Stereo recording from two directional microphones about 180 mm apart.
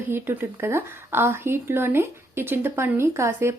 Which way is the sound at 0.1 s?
10° right (ahead or behind).